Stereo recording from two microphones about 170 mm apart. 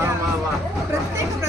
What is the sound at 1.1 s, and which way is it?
Chatter, 20° right (ahead or behind).